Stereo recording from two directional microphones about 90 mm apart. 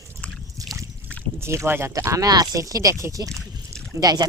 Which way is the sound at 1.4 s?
30° right (ahead or behind).